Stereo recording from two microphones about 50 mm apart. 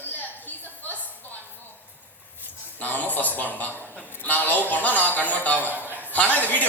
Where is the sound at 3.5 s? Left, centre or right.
Left.